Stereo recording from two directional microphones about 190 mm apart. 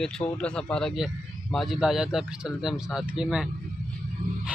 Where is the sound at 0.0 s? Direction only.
5° left (ahead or behind).